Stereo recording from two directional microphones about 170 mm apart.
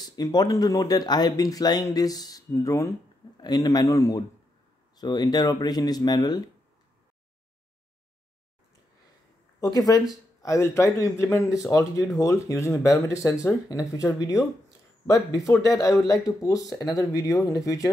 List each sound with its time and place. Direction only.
0.0 s speech: 25° left (ahead or behind)
9.6 s speech: 20° left (ahead or behind)